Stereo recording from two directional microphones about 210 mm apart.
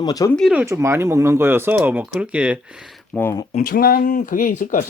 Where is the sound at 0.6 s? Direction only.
15° right (ahead or behind).